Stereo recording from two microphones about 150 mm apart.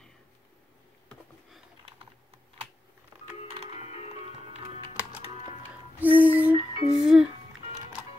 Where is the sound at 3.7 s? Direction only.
45° left (ahead or behind).